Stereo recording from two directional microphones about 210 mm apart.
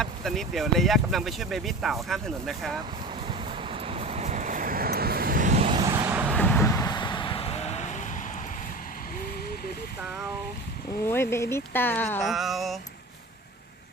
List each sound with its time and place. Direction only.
0.0 s speech: centre (ahead or behind)
3.2 s vehicle: 25° right (ahead or behind)
5.9 s vehicle: 10° right (ahead or behind)
6.3 s vehicle: 10° left (ahead or behind); by 8.2 s 35° left (ahead or behind)
11.0 s speech: 10° left (ahead or behind)